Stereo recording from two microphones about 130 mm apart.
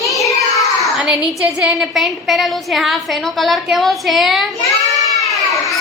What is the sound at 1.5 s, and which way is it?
A woman's voice, 10° right (ahead or behind).